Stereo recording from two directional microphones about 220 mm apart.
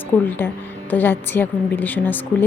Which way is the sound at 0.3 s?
10° left (ahead or behind).